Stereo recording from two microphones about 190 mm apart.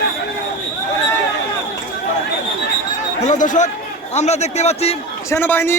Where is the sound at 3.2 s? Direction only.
40° left (ahead or behind).